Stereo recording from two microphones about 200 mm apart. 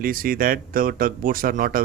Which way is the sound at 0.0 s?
45° right (ahead or behind).